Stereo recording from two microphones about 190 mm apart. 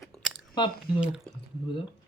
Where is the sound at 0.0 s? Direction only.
Centre (ahead or behind).